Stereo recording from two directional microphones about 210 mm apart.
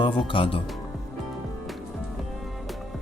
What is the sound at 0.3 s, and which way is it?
Speech, 25° left (ahead or behind).